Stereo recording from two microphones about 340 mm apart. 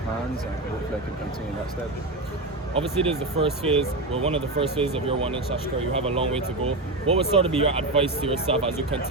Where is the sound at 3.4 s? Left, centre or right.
Centre.